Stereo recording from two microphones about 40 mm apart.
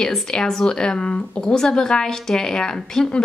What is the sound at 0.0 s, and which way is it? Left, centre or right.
A woman's voice, centre.